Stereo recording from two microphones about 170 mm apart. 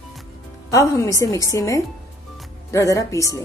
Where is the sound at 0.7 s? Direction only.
20° left (ahead or behind).